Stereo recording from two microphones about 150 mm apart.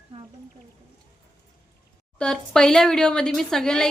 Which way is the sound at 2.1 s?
5° left (ahead or behind).